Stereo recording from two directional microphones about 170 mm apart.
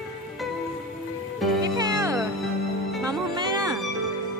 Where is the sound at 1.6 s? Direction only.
25° right (ahead or behind).